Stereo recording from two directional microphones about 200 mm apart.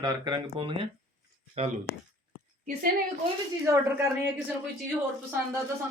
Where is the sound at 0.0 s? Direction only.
20° right (ahead or behind).